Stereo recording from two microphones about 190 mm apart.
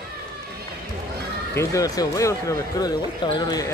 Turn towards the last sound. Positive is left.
turn(degrees=20)  # may be behind; listen again after turning